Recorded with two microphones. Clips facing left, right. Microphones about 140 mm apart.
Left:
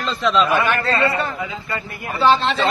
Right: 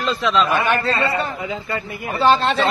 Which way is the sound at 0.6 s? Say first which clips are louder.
Left 1 dB; 20° right (ahead or behind).